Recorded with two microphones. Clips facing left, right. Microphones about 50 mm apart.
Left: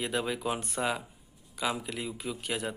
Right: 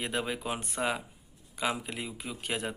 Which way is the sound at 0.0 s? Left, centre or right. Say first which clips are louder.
Left 2 dB; right.